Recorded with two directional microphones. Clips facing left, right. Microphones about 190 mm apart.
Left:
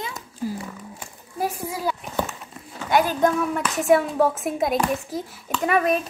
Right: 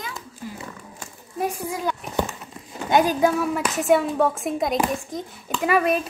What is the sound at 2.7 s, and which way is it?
Clip-clop, 20° right (ahead or behind).